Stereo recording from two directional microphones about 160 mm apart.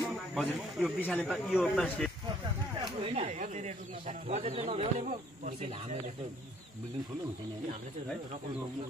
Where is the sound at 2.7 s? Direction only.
40° right (ahead or behind).